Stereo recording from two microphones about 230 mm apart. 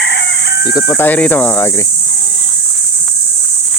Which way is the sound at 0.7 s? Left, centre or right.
Centre.